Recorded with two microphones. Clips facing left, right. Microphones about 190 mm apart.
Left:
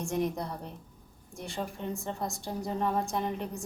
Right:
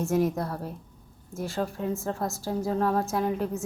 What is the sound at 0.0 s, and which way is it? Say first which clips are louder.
A woman's voice: right 6 dB; 5° right (ahead or behind).